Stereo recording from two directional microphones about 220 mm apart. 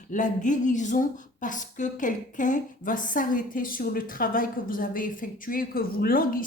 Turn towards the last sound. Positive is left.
turn(degrees=40)  # may be behind; listen again after turning